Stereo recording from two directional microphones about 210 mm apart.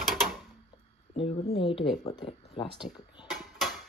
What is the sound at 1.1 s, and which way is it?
Speech, 25° left (ahead or behind).